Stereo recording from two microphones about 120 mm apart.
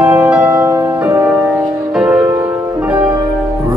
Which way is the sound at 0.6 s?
25° right (ahead or behind).